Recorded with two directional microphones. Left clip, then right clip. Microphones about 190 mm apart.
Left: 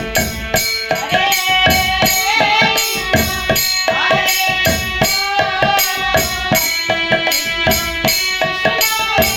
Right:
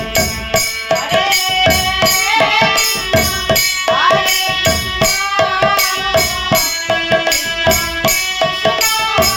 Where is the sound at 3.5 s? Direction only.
10° right (ahead or behind).